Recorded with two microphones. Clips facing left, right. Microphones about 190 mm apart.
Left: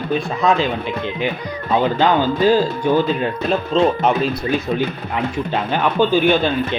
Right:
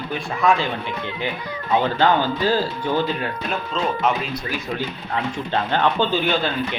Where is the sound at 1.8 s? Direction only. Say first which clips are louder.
Left 4 dB; 15° left (ahead or behind).